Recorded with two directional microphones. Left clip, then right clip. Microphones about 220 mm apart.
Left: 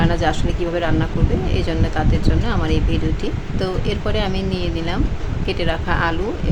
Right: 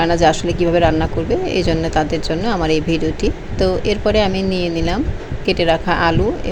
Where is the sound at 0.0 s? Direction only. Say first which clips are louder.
Right 6 dB; 20° right (ahead or behind).